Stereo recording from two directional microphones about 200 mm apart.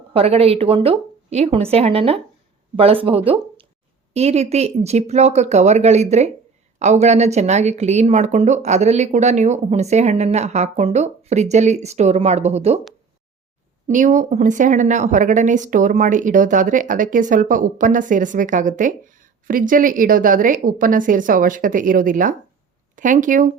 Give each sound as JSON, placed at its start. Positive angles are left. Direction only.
{"t": 0.1, "sound": "speech", "side_deg": -30}
{"t": 13.8, "sound": "speech", "side_deg": -40}